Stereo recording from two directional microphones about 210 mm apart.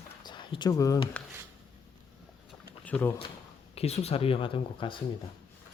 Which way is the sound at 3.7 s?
30° left (ahead or behind).